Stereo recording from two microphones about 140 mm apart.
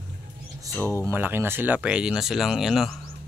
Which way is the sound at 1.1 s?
15° right (ahead or behind).